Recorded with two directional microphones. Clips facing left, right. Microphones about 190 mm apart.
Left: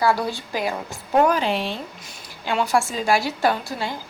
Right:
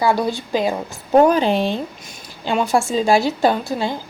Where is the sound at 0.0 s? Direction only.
20° right (ahead or behind).